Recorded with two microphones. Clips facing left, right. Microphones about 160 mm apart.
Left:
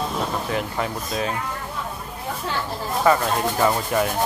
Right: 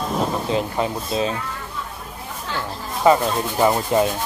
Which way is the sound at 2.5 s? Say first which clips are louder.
Even; 20° right (ahead or behind).